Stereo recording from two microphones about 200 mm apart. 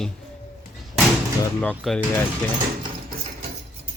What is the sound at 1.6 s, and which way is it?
Speech, 5° left (ahead or behind).